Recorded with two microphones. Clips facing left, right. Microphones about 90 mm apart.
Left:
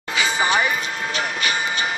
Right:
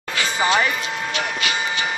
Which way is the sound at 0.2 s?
10° left (ahead or behind).